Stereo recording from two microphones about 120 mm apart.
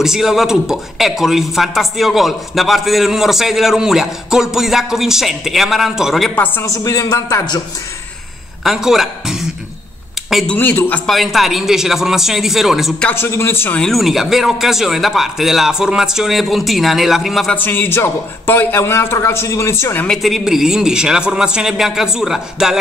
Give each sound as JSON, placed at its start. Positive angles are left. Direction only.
{"t": 0.0, "sound": "speech", "side_deg": -5}
{"t": 6.3, "sound": "a man's voice", "side_deg": 15}
{"t": 6.6, "sound": "a man's voice", "side_deg": 30}
{"t": 8.6, "sound": "speech", "side_deg": -5}
{"t": 10.3, "sound": "a man's voice", "side_deg": 10}
{"t": 11.1, "sound": "speech", "side_deg": 0}
{"t": 13.0, "sound": "a man's voice", "side_deg": 20}
{"t": 13.7, "sound": "speech", "side_deg": 0}
{"t": 17.6, "sound": "a man's voice", "side_deg": 15}
{"t": 20.1, "sound": "speech", "side_deg": 0}